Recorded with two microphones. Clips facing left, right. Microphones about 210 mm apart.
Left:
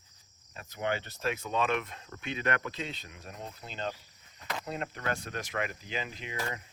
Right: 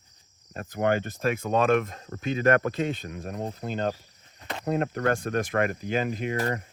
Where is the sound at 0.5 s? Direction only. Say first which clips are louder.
Right 8 dB; 50° right (ahead or behind).